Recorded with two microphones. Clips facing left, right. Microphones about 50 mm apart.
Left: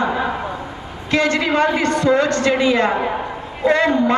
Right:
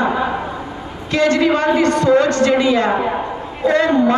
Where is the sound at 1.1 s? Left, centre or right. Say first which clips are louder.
Right 3 dB; left.